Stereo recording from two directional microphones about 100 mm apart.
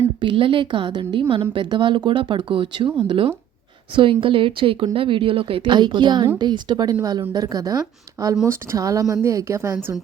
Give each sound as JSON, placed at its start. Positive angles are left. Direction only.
{"t": 0.2, "sound": "a woman's voice", "side_deg": -60}